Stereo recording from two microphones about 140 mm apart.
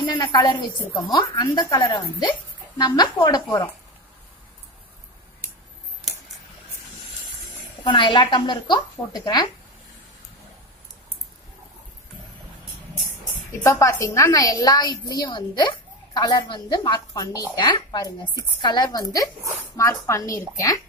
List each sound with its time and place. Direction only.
0.1 s a woman's voice: 35° left (ahead or behind)
7.8 s a woman's voice: 35° left (ahead or behind)
13.7 s a woman's voice: 20° left (ahead or behind)